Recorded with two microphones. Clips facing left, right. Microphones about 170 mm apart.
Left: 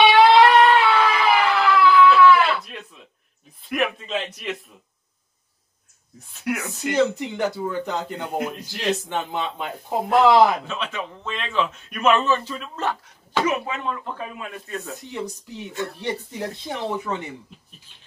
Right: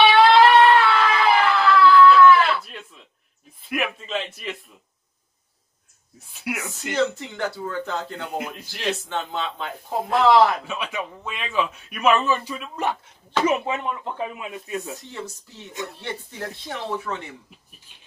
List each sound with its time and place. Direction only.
0.0 s a sound: 20° left (ahead or behind)
2.6 s a sound: centre (ahead or behind)
3.6 s a man's voice: centre (ahead or behind)
6.3 s speech: 10° right (ahead or behind)
6.9 s speech: 15° left (ahead or behind)
8.3 s a man's voice: centre (ahead or behind)
8.7 s speech: 15° left (ahead or behind)
10.7 s speech: 10° right (ahead or behind)
13.5 s speech: 25° right (ahead or behind)
15.0 s speech: 15° left (ahead or behind)